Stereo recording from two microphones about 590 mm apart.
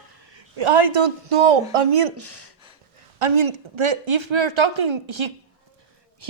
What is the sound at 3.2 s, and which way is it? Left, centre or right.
Speech, right.